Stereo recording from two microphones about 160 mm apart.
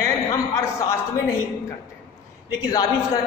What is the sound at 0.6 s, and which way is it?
Speech, 20° left (ahead or behind).